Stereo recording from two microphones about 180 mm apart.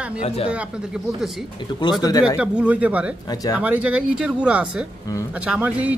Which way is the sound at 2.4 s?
5° right (ahead or behind).